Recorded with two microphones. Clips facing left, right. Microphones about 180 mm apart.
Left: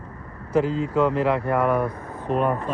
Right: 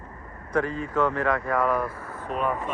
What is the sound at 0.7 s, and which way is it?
Speech, 80° left.